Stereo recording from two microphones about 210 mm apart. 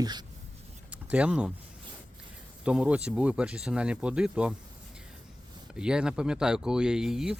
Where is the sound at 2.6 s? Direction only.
5° right (ahead or behind).